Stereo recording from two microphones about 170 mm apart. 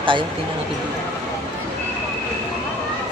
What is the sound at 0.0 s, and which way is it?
Speech, 30° right (ahead or behind).